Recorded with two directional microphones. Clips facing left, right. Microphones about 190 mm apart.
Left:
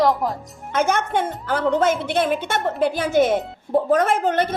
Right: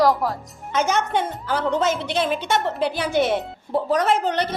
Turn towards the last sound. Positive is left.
turn(degrees=50)  # may be behind; listen again after turning